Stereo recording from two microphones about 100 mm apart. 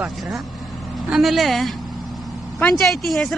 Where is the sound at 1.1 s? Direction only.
Centre (ahead or behind).